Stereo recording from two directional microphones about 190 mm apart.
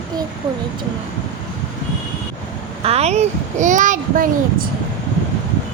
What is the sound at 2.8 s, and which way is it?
A child's voice, 35° right (ahead or behind).